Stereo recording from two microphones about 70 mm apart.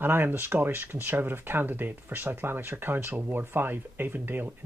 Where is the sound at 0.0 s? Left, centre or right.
Right.